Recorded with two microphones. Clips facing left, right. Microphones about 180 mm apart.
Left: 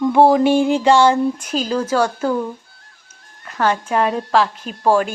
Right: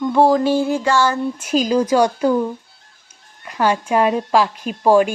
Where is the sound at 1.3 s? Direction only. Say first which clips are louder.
Right 4 dB; 10° right (ahead or behind).